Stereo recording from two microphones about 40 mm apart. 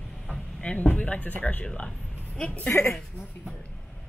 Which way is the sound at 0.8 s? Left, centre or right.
Left.